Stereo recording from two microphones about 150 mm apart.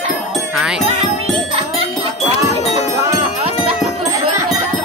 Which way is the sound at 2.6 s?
45° left (ahead or behind).